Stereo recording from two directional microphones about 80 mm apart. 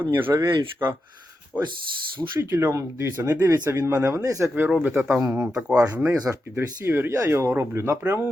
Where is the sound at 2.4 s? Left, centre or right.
Right.